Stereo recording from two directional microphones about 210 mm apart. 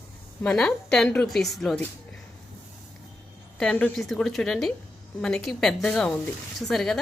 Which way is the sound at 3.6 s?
5° left (ahead or behind).